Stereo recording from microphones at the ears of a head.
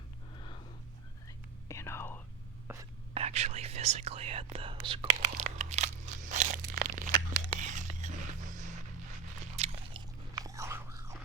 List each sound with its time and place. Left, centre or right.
1.6 s whispering: left
3.2 s whispering: right
9.0 s biting: right